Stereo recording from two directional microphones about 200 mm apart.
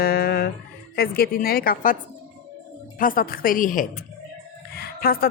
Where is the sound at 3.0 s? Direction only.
45° left (ahead or behind).